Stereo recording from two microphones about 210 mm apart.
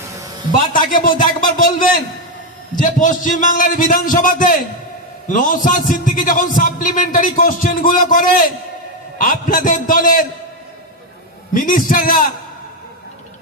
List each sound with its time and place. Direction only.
0.7 s a man's voice: 40° left (ahead or behind)
2.7 s a man's voice: 40° left (ahead or behind)
11.5 s a man's voice: 40° left (ahead or behind)